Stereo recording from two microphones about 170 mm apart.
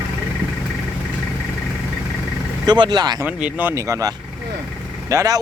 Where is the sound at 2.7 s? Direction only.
25° right (ahead or behind).